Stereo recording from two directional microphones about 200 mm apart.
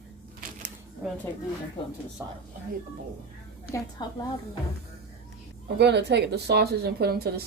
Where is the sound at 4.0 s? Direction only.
20° left (ahead or behind).